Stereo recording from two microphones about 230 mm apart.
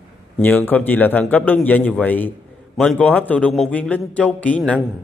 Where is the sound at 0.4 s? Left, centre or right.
Centre.